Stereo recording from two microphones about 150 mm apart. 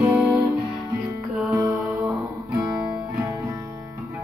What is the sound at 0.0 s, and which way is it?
Music, 5° right (ahead or behind).